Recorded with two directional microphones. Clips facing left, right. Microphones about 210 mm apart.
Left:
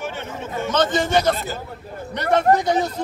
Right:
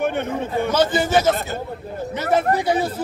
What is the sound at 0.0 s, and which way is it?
Speech, 55° right (ahead or behind).